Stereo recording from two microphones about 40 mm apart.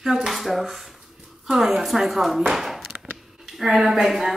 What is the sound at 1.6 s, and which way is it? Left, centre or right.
A woman's voice, centre.